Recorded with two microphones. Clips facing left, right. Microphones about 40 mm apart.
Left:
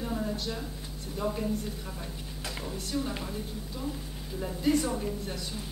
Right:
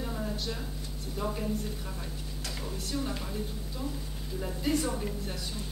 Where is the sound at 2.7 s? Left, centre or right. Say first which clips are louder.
Left 1 dB; centre.